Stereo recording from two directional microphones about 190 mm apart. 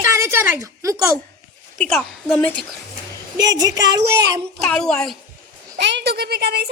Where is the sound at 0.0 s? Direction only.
15° right (ahead or behind).